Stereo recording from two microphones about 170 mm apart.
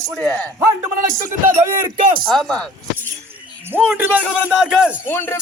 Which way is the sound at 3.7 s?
10° right (ahead or behind).